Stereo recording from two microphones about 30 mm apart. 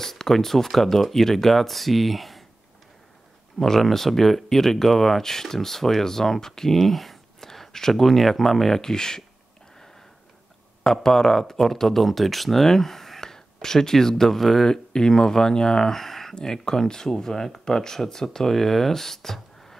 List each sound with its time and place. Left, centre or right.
0.0 s speech: centre
3.5 s speech: centre
7.3 s a sound: centre
7.9 s speech: centre
8.9 s speech: centre
10.8 s speech: centre
14.7 s speech: left
16.6 s speech: centre